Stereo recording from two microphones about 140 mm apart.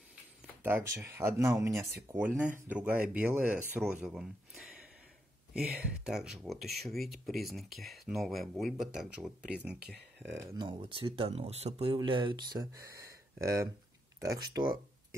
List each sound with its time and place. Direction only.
0.7 s speech: 15° right (ahead or behind)
10.3 s speech: 25° right (ahead or behind)